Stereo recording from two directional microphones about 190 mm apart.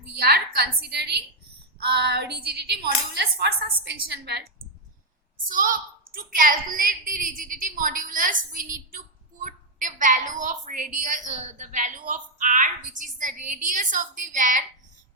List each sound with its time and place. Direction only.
0.2 s a woman's voice: 55° right (ahead or behind)
5.5 s a woman's voice: 45° right (ahead or behind)